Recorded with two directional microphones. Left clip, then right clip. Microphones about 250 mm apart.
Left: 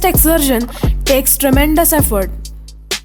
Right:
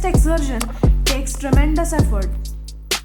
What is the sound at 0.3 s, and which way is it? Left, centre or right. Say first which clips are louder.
Speech: left 9 dB; left.